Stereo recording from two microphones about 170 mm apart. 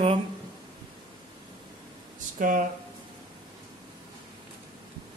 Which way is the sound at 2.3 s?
55° right (ahead or behind).